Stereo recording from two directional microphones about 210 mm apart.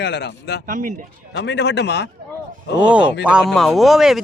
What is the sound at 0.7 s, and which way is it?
Speech, 40° right (ahead or behind).